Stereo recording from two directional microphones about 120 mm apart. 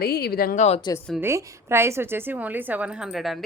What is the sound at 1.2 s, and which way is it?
A woman's voice, 20° right (ahead or behind).